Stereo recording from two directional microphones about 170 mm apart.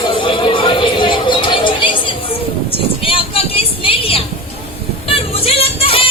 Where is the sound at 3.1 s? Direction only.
35° left (ahead or behind).